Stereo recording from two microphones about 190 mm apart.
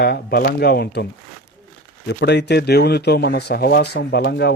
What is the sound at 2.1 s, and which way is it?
Speech, 65° left (ahead or behind).